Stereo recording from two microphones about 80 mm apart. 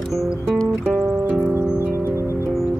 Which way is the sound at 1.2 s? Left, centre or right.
Right.